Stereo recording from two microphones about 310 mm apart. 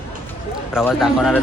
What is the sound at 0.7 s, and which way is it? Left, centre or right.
Speech, centre.